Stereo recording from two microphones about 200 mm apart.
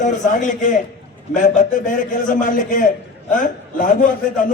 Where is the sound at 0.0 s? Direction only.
40° left (ahead or behind).